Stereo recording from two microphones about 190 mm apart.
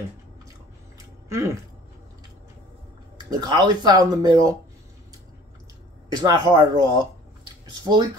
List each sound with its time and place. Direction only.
0.9 s a sound: 15° right (ahead or behind)
3.3 s speech: 20° right (ahead or behind)
6.2 s speech: 20° right (ahead or behind)